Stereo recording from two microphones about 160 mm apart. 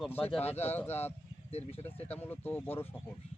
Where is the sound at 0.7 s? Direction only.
10° left (ahead or behind).